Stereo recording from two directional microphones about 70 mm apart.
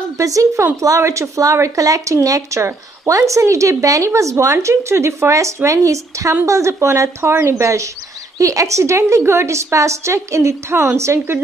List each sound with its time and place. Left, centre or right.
0.2 s speech: right